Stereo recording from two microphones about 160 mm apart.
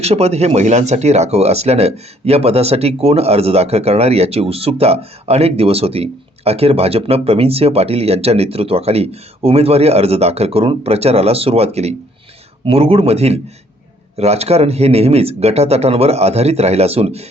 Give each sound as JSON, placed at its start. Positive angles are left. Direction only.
{"t": 0.0, "sound": "speech", "side_deg": -40}